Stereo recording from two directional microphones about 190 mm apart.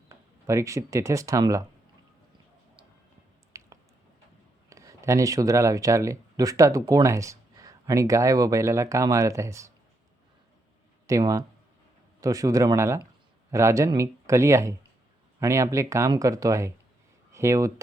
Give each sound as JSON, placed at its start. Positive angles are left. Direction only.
{"t": 0.1, "sound": "speech", "side_deg": -15}
{"t": 3.5, "sound": "squish", "side_deg": -15}
{"t": 4.7, "sound": "speech", "side_deg": -15}
{"t": 11.0, "sound": "speech", "side_deg": -15}